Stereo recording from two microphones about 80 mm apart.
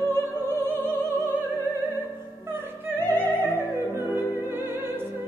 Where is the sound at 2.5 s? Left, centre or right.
Right.